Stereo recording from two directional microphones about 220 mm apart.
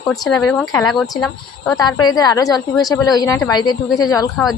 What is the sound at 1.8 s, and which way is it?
Speech, 20° left (ahead or behind).